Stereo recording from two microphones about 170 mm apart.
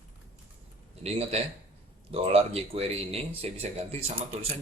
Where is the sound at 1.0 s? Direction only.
35° right (ahead or behind).